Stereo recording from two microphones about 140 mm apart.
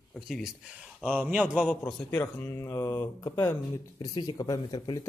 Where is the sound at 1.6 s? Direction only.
10° left (ahead or behind).